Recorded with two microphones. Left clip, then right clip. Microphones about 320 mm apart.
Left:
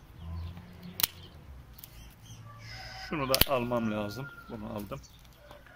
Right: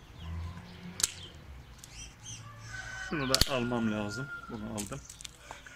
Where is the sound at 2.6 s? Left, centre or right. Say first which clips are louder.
Right 2 dB; centre.